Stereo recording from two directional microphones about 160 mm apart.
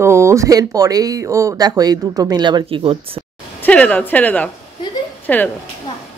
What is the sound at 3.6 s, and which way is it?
Speech, 10° left (ahead or behind).